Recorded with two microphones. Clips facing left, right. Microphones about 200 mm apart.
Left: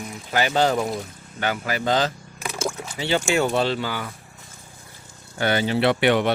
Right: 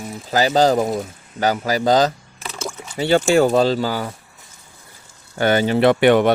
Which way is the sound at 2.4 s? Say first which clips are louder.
Left 2 dB; 10° left (ahead or behind).